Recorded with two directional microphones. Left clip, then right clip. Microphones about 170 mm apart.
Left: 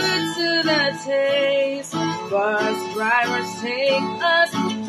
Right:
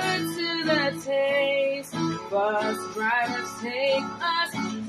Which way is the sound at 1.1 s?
20° left (ahead or behind).